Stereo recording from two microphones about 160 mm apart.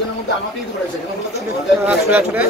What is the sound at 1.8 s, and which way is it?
Speech, 10° right (ahead or behind).